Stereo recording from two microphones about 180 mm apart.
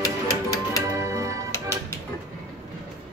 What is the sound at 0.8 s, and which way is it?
Music, 15° right (ahead or behind).